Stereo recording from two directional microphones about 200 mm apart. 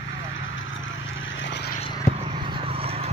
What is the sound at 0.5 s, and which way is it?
Vehicle, 70° left (ahead or behind).